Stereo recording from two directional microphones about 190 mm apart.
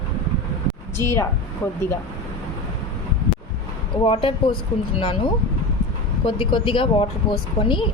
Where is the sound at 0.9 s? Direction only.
15° left (ahead or behind).